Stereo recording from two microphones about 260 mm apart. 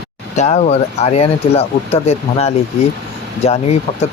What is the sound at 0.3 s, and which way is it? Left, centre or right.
Speech, left.